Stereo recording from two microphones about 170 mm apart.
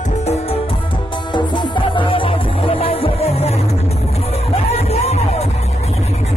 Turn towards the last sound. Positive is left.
turn(degrees=40)  # may be behind; listen again after turning